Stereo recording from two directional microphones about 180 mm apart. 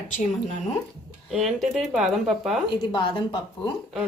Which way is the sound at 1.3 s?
Centre (ahead or behind).